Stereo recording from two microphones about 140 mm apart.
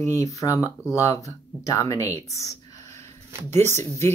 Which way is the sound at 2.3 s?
25° left (ahead or behind).